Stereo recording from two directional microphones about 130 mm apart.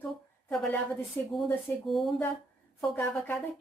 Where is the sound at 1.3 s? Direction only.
Centre (ahead or behind).